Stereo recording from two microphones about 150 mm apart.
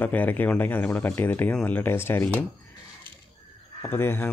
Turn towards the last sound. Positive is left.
turn(degrees=15)  # may be behind; listen again after turning